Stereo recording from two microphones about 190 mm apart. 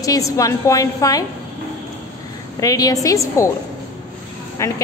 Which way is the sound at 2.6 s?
20° left (ahead or behind).